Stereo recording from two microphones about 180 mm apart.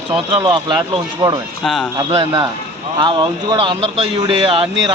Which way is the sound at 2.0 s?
25° right (ahead or behind).